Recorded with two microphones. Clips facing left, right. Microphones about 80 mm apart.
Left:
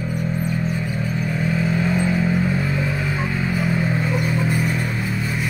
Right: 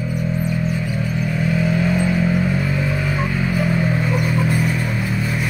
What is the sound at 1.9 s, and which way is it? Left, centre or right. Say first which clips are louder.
Vehicle: right 1 dB; left.